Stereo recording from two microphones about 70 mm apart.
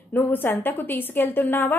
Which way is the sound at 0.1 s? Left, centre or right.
Left.